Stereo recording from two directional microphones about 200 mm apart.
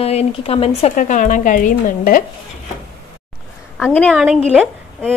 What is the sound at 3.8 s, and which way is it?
Speech, 5° left (ahead or behind).